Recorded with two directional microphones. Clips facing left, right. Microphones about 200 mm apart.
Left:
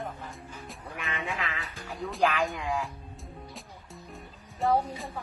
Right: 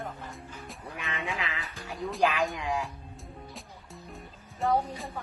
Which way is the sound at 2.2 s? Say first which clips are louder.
Even; 10° right (ahead or behind).